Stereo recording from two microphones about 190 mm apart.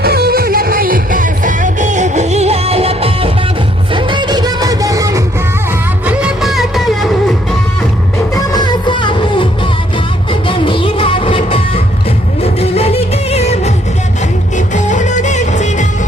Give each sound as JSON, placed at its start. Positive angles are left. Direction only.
{"t": 0.0, "sound": "music", "side_deg": -55}
{"t": 6.1, "sound": "music", "side_deg": -5}
{"t": 8.4, "sound": "music", "side_deg": 20}
{"t": 10.5, "sound": "music", "side_deg": 25}
{"t": 14.8, "sound": "music", "side_deg": 40}